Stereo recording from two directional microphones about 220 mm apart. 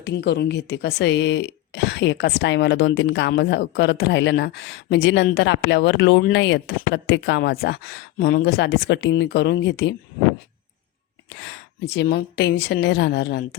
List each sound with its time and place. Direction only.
0.0 s speech: 50° left (ahead or behind)
11.3 s speech: 55° left (ahead or behind)